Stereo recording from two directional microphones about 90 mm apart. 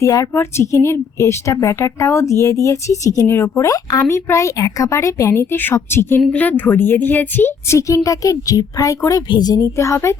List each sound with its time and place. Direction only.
0.0 s a woman's voice: 35° left (ahead or behind)
3.2 s a woman's voice: 25° left (ahead or behind)
3.6 s a woman's voice: 40° left (ahead or behind)
9.7 s a woman's voice: 30° left (ahead or behind)